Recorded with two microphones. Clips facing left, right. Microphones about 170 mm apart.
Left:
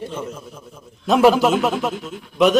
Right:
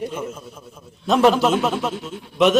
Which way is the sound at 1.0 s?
5° left (ahead or behind).